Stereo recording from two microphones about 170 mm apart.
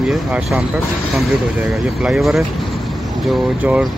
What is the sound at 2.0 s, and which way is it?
Speech, centre (ahead or behind).